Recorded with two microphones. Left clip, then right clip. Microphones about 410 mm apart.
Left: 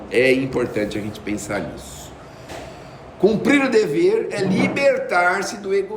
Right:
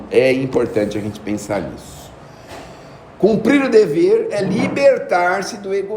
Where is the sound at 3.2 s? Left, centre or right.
Centre.